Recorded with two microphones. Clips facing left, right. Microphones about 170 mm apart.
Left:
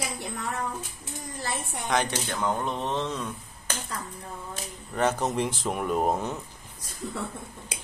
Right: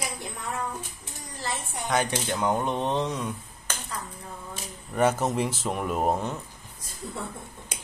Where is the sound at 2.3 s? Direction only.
15° right (ahead or behind).